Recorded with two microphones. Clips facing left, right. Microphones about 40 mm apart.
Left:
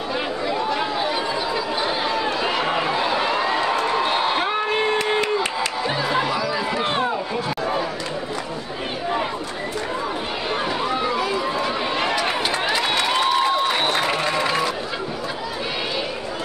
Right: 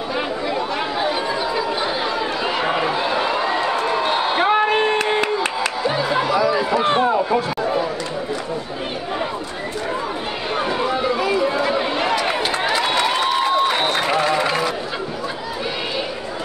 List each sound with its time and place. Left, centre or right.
0.5 s chatter: centre
4.4 s a sound: centre
5.9 s music: centre
6.4 s run: centre
10.5 s run: centre